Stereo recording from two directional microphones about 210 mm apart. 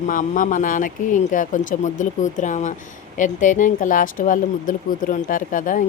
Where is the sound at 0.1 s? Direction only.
40° left (ahead or behind).